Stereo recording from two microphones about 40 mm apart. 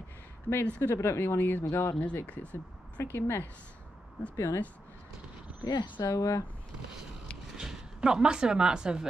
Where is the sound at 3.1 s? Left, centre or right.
Left.